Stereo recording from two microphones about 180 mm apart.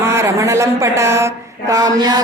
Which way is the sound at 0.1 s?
15° right (ahead or behind).